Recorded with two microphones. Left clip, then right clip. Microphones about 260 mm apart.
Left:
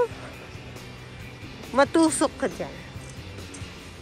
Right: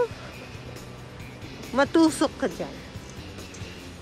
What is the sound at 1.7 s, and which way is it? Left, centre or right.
Speech, centre.